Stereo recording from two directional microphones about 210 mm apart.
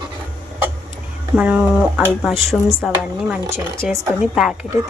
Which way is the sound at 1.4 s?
5° right (ahead or behind).